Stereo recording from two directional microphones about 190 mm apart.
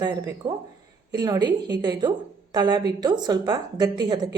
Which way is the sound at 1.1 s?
20° right (ahead or behind).